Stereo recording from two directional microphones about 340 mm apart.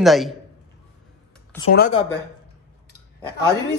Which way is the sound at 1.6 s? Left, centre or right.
Left.